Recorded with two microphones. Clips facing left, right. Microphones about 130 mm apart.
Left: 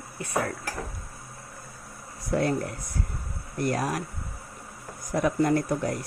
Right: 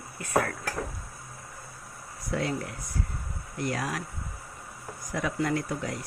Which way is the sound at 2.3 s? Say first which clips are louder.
Left 5 dB; 50° left (ahead or behind).